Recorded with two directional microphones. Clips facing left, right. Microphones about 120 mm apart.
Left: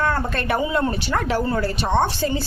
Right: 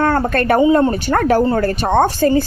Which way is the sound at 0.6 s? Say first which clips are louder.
Right 11 dB; 30° right (ahead or behind).